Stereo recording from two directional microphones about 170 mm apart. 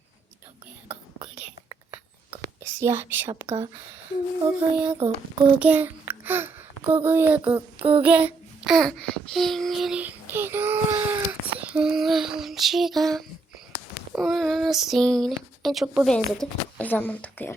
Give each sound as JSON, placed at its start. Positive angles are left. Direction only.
{"t": 2.6, "sound": "speech", "side_deg": -15}
{"t": 4.9, "sound": "child singing", "side_deg": -35}
{"t": 5.5, "sound": "a child's voice", "side_deg": -10}
{"t": 7.5, "sound": "child singing", "side_deg": -30}
{"t": 8.0, "sound": "a child's voice", "side_deg": -10}
{"t": 14.1, "sound": "child singing", "side_deg": 0}